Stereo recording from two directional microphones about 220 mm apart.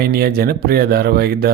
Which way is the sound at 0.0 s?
45° right (ahead or behind).